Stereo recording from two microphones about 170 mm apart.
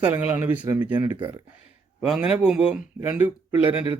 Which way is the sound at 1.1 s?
30° right (ahead or behind).